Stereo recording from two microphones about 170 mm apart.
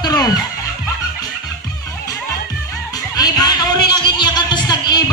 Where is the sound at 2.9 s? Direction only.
25° left (ahead or behind).